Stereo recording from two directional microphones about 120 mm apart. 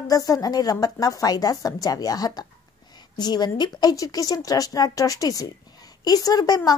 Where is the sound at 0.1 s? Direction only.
30° left (ahead or behind).